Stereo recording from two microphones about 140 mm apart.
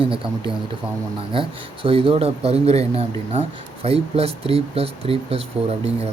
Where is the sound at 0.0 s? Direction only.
40° right (ahead or behind).